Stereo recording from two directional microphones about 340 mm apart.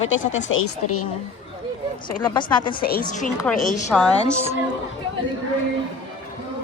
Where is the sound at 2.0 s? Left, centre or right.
Centre.